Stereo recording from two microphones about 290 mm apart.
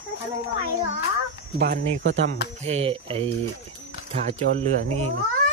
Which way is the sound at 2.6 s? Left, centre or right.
Right.